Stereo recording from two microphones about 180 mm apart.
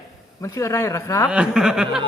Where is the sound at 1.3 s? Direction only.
5° right (ahead or behind).